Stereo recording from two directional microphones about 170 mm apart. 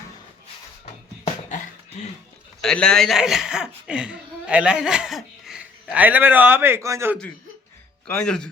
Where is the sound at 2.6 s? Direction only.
5° left (ahead or behind); by 7.2 s 15° right (ahead or behind).